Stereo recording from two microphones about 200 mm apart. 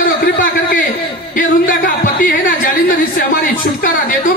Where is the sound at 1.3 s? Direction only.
45° left (ahead or behind).